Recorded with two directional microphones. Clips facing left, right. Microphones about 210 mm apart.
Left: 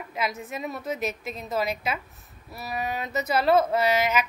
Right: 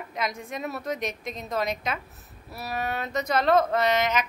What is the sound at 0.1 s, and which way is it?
A woman's voice, 5° left (ahead or behind).